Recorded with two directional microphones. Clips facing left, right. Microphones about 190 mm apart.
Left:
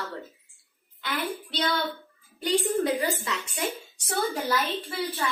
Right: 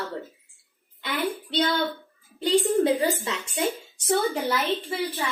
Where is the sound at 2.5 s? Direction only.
30° right (ahead or behind).